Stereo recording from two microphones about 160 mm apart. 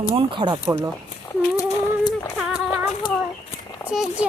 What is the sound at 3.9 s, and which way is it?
Speech, 5° right (ahead or behind).